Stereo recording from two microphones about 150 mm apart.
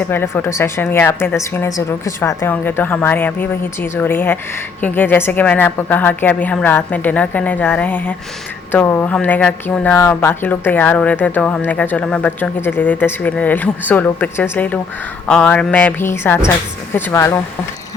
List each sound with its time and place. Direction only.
0.1 s speech: 15° left (ahead or behind)